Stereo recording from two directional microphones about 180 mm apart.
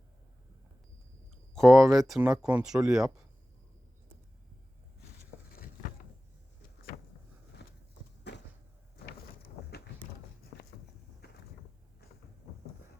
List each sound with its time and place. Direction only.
1.5 s speech: centre (ahead or behind)
7.6 s horse: 70° left (ahead or behind)
8.3 s cupboard open or close: 70° left (ahead or behind)
11.2 s a sound: 65° left (ahead or behind)